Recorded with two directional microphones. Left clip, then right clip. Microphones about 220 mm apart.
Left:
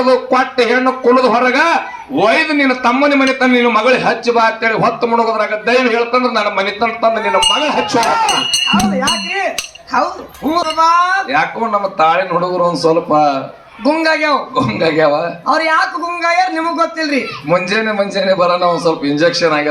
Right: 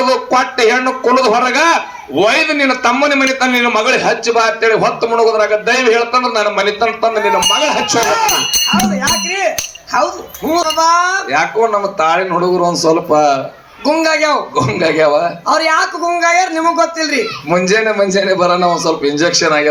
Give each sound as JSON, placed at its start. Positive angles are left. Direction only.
{"t": 0.0, "sound": "a man's voice", "side_deg": -35}
{"t": 8.4, "sound": "speech", "side_deg": -20}
{"t": 10.8, "sound": "a man's voice", "side_deg": -35}